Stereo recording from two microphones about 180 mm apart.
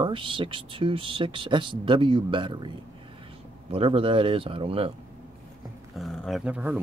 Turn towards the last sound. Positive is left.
turn(degrees=-5)  # may be behind; listen again after turning